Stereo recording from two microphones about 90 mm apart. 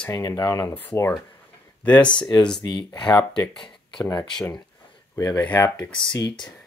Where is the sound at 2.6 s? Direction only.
50° left (ahead or behind).